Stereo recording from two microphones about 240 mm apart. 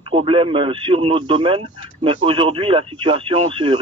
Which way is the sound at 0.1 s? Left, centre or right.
Right.